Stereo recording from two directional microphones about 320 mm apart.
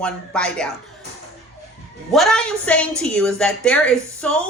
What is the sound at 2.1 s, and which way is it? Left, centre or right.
A woman's voice, centre.